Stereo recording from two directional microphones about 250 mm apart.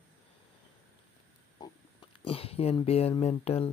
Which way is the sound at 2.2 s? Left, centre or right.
Left.